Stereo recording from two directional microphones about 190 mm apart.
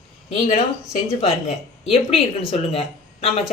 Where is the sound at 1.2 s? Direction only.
35° left (ahead or behind).